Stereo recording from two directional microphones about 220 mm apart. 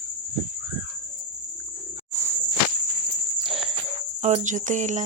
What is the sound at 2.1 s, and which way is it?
Cricket, 10° right (ahead or behind).